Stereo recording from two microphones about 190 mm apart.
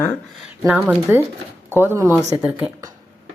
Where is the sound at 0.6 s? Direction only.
5° right (ahead or behind).